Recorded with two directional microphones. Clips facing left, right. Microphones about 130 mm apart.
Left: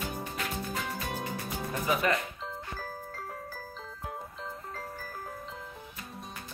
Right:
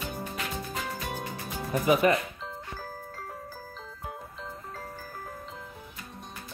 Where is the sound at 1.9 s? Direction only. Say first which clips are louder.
Right 6 dB; 20° right (ahead or behind).